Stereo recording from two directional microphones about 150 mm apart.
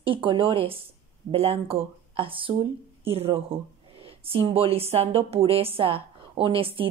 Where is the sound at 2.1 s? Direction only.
35° right (ahead or behind).